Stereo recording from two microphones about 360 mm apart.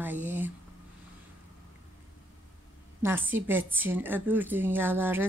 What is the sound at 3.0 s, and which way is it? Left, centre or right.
A woman's voice, centre.